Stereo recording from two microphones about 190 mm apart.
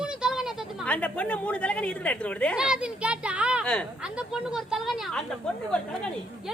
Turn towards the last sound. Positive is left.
turn(degrees=5)  # may be behind; listen again after turning